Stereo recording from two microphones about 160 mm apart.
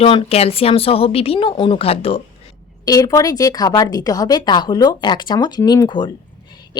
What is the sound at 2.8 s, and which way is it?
Speech, 20° left (ahead or behind).